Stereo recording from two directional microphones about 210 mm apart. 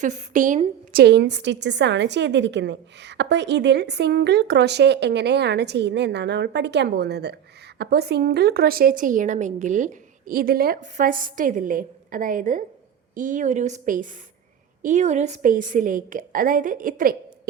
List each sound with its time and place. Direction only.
0.0 s a woman's voice: 35° right (ahead or behind)
1.0 s a woman's voice: 55° right (ahead or behind)